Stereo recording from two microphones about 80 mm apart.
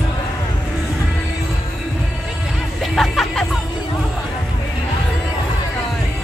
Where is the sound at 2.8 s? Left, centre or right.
Centre.